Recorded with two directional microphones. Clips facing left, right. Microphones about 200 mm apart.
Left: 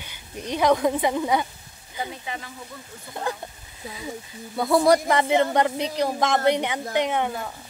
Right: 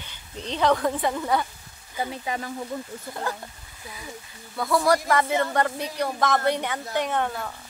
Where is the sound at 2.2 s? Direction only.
40° right (ahead or behind).